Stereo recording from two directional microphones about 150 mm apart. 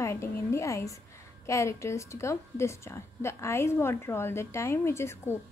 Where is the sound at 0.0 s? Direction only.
20° left (ahead or behind).